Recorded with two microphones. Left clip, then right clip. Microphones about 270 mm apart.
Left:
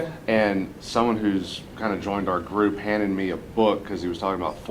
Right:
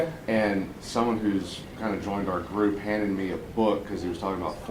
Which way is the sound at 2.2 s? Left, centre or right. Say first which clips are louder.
Left 4 dB; centre.